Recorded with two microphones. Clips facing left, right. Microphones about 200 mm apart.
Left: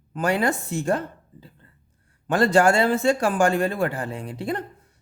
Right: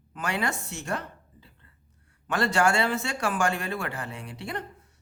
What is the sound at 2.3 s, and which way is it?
Speech, 35° left (ahead or behind).